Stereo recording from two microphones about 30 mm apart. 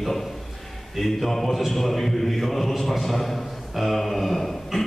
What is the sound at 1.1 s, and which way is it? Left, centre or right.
Mantra, centre.